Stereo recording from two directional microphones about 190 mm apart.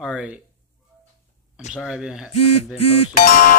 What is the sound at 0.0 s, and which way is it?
Speech, 5° right (ahead or behind).